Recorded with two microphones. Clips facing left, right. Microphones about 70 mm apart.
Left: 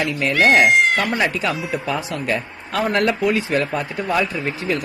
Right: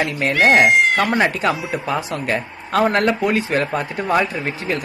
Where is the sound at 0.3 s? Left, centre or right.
Centre.